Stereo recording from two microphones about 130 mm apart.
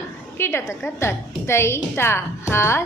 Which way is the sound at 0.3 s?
20° left (ahead or behind).